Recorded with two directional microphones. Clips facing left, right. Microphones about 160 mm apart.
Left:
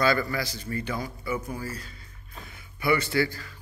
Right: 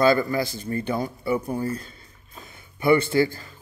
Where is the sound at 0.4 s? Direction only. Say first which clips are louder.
Right 6 dB; 50° right (ahead or behind).